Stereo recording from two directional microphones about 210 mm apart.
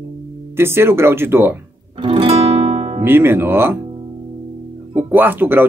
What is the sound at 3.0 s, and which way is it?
Speech, 10° right (ahead or behind).